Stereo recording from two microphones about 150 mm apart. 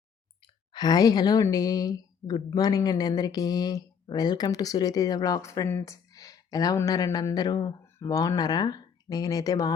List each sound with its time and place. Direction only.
0.4 s a woman's voice: 30° left (ahead or behind)